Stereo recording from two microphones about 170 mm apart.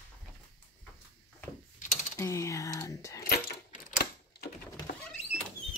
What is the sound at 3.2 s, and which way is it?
Keys jangling, 65° left (ahead or behind).